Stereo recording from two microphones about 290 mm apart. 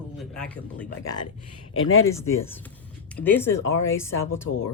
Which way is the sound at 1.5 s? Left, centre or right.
Left.